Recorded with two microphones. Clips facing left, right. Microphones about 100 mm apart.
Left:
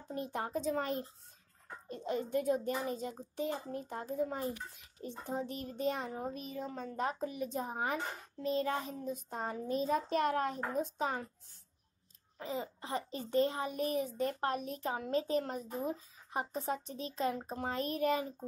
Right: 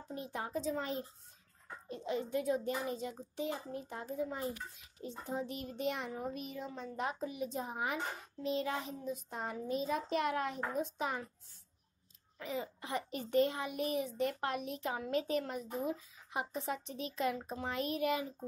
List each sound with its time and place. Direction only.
0.1 s a woman's voice: 50° left (ahead or behind)
6.7 s a woman's voice: 50° left (ahead or behind)
12.4 s a child's voice: 35° left (ahead or behind)